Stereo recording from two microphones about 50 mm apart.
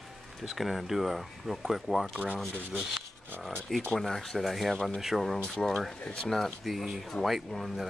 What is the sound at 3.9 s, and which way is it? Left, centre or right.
Speech, centre.